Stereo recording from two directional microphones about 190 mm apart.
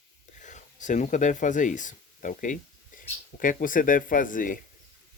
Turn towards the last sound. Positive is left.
turn(degrees=45)  # may be behind; listen again after turning